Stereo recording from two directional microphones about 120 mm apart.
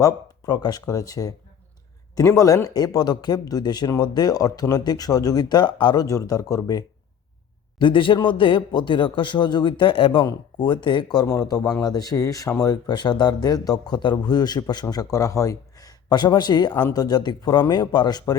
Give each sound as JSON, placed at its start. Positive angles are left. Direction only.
{"t": 0.0, "sound": "speech", "side_deg": 35}
{"t": 7.8, "sound": "speech", "side_deg": 45}